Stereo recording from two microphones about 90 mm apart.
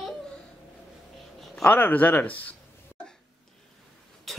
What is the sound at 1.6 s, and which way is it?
Speech, 20° left (ahead or behind).